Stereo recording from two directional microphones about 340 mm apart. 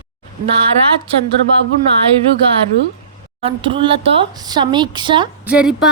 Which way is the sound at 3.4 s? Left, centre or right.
Centre.